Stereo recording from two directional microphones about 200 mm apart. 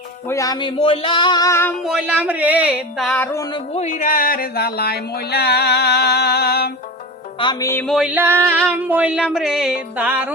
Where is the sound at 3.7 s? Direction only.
40° left (ahead or behind).